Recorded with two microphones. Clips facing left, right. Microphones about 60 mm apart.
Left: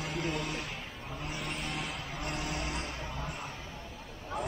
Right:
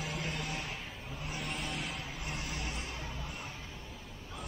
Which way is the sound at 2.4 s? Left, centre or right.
Left.